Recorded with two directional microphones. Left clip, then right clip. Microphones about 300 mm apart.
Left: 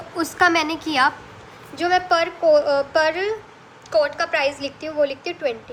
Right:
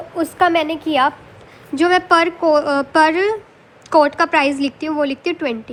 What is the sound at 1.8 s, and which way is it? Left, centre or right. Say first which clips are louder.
A woman's voice: right 5 dB; centre.